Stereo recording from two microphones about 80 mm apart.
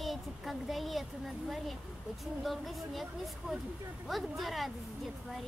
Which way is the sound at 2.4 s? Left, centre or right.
Centre.